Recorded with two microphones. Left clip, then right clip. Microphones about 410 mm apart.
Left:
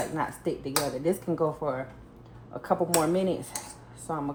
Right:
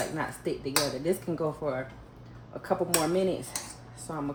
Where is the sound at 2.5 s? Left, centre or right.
Centre.